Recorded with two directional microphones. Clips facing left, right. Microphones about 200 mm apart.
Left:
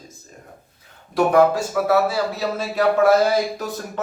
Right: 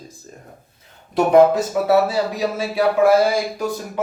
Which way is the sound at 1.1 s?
20° right (ahead or behind).